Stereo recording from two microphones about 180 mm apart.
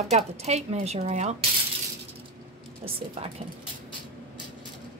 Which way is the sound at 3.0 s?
30° right (ahead or behind).